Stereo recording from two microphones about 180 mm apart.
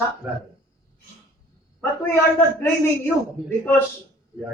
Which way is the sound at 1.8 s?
15° left (ahead or behind).